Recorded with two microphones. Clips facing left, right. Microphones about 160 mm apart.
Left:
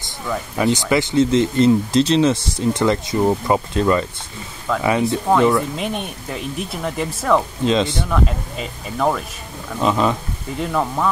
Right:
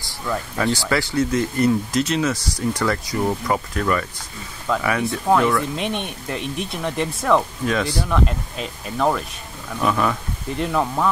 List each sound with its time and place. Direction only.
0.6 s speech: 20° left (ahead or behind)
4.7 s speech: centre (ahead or behind)
7.6 s speech: 20° left (ahead or behind)
8.0 s speech: centre (ahead or behind)
9.8 s speech: 20° left (ahead or behind)
10.5 s speech: centre (ahead or behind)